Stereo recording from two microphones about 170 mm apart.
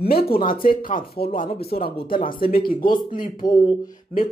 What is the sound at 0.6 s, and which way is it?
A man's voice, 55° left (ahead or behind).